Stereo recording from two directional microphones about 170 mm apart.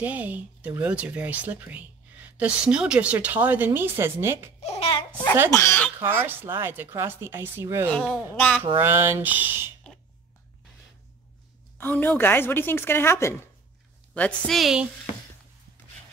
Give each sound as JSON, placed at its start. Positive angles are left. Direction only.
{"t": 0.0, "sound": "speech", "side_deg": -10}
{"t": 4.6, "sound": "speech", "side_deg": 40}
{"t": 5.5, "sound": "a woman's voice", "side_deg": 15}
{"t": 5.9, "sound": "speech", "side_deg": -15}
{"t": 8.4, "sound": "a woman's voice", "side_deg": 5}
{"t": 8.8, "sound": "speech", "side_deg": -15}
{"t": 11.8, "sound": "a woman's voice", "side_deg": 10}
{"t": 14.1, "sound": "a woman's voice", "side_deg": 5}